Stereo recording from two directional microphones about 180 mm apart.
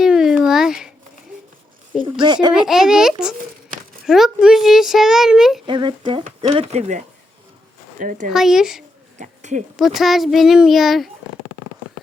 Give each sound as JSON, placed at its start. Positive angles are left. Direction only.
{"t": 0.0, "sound": "a sound", "side_deg": -5}
{"t": 2.2, "sound": "speech", "side_deg": -25}
{"t": 2.6, "sound": "a child's voice", "side_deg": -5}
{"t": 5.6, "sound": "speech", "side_deg": -25}
{"t": 8.3, "sound": "a child's voice", "side_deg": -5}
{"t": 9.1, "sound": "a sound", "side_deg": -40}
{"t": 9.7, "sound": "a child's voice", "side_deg": 0}